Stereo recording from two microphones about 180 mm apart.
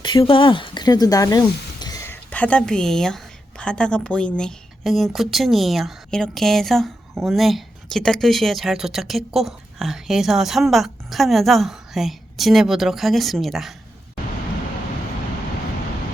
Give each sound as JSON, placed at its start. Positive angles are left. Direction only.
{"t": 0.0, "sound": "a woman's voice", "side_deg": 25}